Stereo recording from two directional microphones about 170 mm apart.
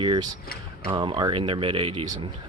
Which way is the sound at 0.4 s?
65° left (ahead or behind).